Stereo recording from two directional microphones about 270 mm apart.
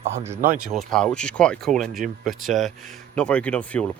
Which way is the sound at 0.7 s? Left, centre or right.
Centre.